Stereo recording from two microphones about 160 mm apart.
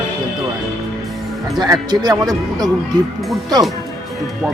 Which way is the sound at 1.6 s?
25° right (ahead or behind).